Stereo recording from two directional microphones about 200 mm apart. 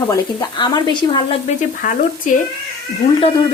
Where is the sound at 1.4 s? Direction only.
40° left (ahead or behind).